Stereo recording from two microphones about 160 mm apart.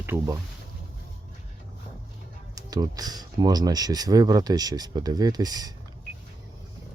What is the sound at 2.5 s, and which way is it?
Speech, 25° right (ahead or behind).